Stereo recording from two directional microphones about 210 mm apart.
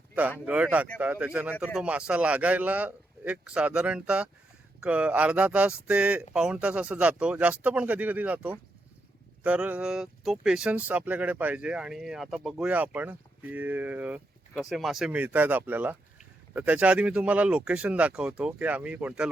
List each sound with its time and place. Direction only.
0.4 s speech: 5° right (ahead or behind)